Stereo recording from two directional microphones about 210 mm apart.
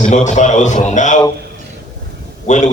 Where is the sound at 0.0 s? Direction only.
35° left (ahead or behind).